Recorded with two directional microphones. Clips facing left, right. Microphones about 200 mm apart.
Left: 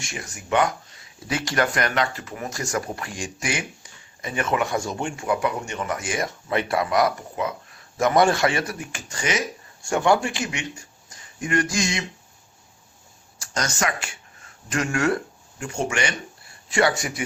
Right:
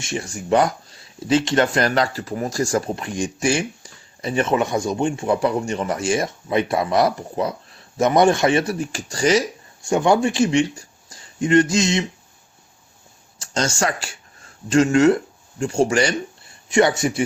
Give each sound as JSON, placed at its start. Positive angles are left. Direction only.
{"t": 0.0, "sound": "speech", "side_deg": -30}
{"t": 7.9, "sound": "speech", "side_deg": -20}
{"t": 9.9, "sound": "speech", "side_deg": -20}
{"t": 13.4, "sound": "speech", "side_deg": -25}
{"t": 16.6, "sound": "speech", "side_deg": -20}